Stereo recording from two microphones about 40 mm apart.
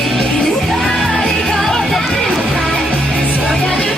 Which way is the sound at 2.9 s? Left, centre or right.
Left.